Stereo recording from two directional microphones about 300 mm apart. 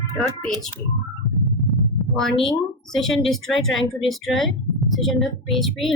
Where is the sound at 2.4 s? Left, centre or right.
Centre.